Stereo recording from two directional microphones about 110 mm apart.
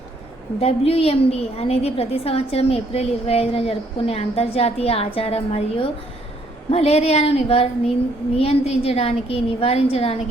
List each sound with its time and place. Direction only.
0.6 s a woman's voice: 65° left (ahead or behind)